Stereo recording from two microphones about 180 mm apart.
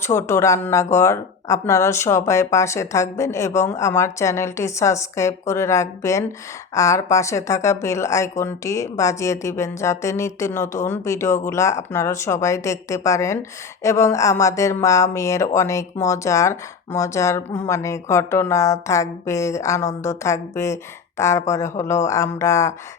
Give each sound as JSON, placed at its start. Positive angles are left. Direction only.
{"t": 0.0, "sound": "speech", "side_deg": 15}